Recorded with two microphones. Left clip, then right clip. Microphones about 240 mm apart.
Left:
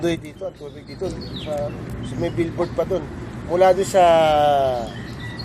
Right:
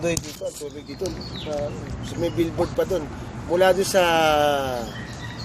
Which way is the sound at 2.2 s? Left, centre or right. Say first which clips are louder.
Even; centre.